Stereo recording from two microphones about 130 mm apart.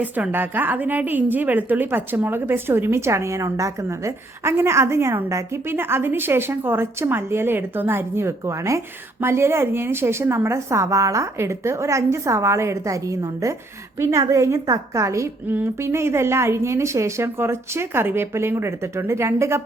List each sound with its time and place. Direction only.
0.0 s a woman's voice: 15° right (ahead or behind)